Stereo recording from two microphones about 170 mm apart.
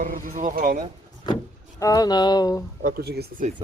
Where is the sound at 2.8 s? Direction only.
70° right (ahead or behind).